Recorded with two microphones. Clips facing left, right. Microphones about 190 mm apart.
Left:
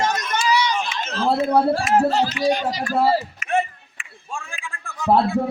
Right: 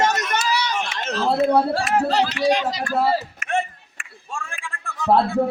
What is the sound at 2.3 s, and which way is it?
Speech, 75° right (ahead or behind).